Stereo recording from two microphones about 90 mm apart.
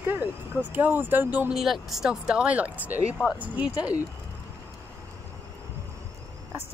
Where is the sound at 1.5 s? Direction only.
5° right (ahead or behind).